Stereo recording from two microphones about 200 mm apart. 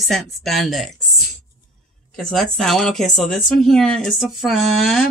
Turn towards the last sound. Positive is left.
turn(degrees=0)  # may be behind; listen again after turning